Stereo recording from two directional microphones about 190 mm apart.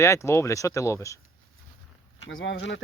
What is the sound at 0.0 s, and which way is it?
Speech, 15° left (ahead or behind).